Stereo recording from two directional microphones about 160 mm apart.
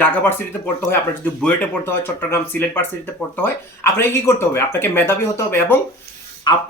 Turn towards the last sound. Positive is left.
turn(degrees=25)  # may be behind; listen again after turning